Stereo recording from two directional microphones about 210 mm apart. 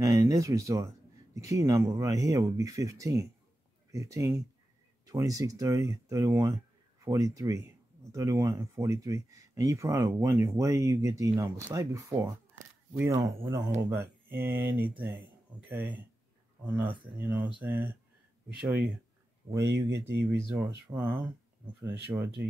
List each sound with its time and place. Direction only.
0.0 s speech: 15° right (ahead or behind)
19.5 s speech: 25° right (ahead or behind)
20.2 s speech: 10° right (ahead or behind)